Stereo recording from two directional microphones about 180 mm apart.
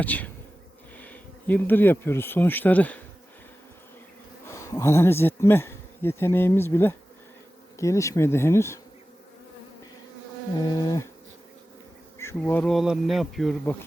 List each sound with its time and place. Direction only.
0.0 s bee: 10° left (ahead or behind)
0.9 s speech: 10° left (ahead or behind)
4.4 s speech: 15° left (ahead or behind)
7.8 s bee: 15° left (ahead or behind)
10.8 s insect: 20° left (ahead or behind)
12.4 s speech: 5° left (ahead or behind)